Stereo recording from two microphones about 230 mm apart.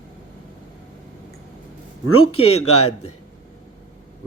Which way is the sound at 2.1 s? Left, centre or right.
Left.